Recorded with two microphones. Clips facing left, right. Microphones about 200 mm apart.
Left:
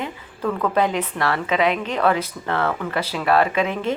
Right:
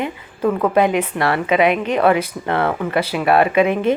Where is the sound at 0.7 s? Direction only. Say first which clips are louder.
Right 5 dB; 15° right (ahead or behind).